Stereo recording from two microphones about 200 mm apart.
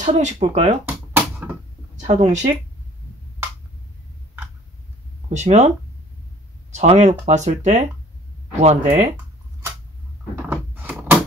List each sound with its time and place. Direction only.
0.0 s speech: 35° right (ahead or behind)
0.8 s a sound: 10° right (ahead or behind)
2.0 s speech: 35° right (ahead or behind)
5.3 s speech: 35° right (ahead or behind)
6.7 s speech: 35° right (ahead or behind)
10.5 s a sound: 10° right (ahead or behind)